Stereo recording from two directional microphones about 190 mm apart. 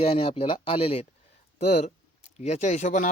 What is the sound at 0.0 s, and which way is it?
Speech, 30° left (ahead or behind).